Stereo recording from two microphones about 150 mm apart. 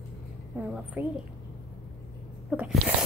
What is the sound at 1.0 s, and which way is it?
Speech, 15° right (ahead or behind).